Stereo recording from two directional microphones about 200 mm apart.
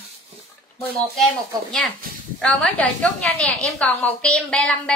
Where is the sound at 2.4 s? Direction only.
5° left (ahead or behind).